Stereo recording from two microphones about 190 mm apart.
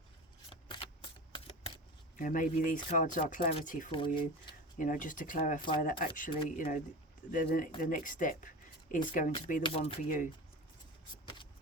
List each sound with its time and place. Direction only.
0.5 s a sound: 25° left (ahead or behind)
2.1 s speech: 45° left (ahead or behind)
3.9 s speech: 25° left (ahead or behind)
4.8 s speech: 45° left (ahead or behind)
9.6 s speech: 30° left (ahead or behind)